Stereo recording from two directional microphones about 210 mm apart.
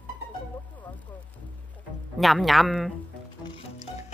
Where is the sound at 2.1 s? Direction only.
Centre (ahead or behind).